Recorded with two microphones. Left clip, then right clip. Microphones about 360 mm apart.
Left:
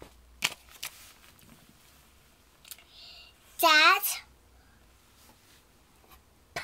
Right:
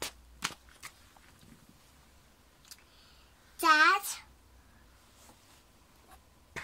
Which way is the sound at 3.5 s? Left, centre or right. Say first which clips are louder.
Left 3 dB; centre.